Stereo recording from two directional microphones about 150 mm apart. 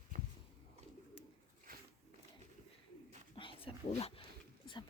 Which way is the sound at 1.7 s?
75° right (ahead or behind).